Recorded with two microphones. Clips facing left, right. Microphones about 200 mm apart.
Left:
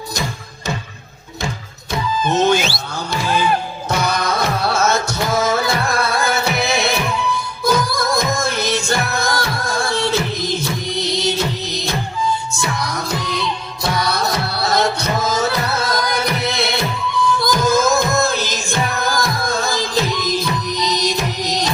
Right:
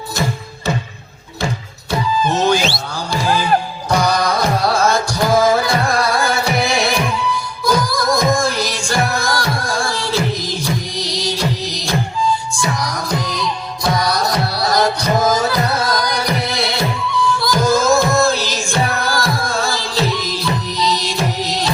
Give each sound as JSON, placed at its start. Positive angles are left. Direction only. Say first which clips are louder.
{"t": 2.2, "sound": "music", "louder": "left 2 dB", "side_deg": 20}
{"t": 3.8, "sound": "music", "louder": "right 3 dB", "side_deg": 25}